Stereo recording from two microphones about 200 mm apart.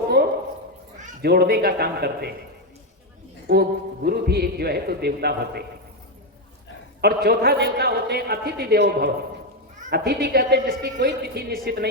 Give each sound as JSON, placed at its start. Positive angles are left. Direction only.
{"t": 1.2, "sound": "a man's voice", "side_deg": -55}
{"t": 3.5, "sound": "a man's voice", "side_deg": -50}
{"t": 7.0, "sound": "a man's voice", "side_deg": -50}